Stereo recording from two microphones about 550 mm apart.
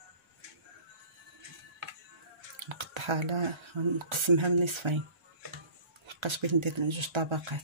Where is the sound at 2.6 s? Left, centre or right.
Right.